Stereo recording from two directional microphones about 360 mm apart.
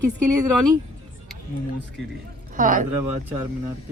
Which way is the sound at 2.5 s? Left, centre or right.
Right.